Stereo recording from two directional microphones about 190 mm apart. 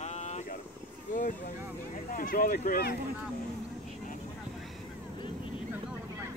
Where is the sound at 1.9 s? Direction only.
45° left (ahead or behind).